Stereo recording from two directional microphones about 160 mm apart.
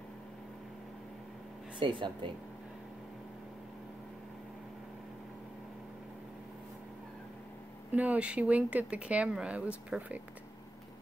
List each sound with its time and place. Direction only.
1.8 s speech: 30° right (ahead or behind)
7.9 s speech: 10° right (ahead or behind)